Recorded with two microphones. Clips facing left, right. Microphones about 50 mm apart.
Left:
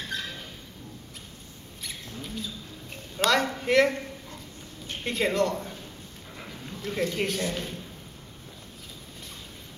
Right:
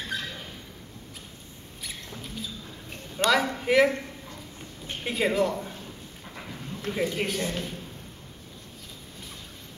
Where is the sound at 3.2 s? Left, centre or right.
Centre.